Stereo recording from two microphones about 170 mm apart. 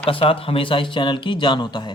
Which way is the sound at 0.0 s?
30° left (ahead or behind).